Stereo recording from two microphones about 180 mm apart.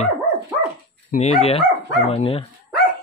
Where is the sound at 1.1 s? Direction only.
35° left (ahead or behind).